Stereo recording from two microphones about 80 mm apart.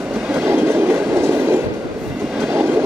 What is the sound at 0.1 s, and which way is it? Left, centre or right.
Train, centre.